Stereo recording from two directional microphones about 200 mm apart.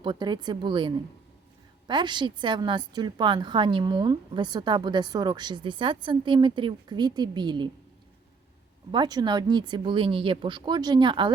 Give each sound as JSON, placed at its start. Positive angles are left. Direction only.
{"t": 0.0, "sound": "a woman's voice", "side_deg": -20}
{"t": 8.9, "sound": "a woman's voice", "side_deg": -20}